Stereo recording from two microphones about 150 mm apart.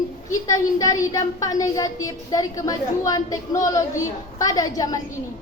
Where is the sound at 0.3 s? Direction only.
20° left (ahead or behind).